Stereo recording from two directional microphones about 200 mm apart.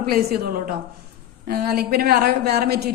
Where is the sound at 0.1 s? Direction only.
50° right (ahead or behind).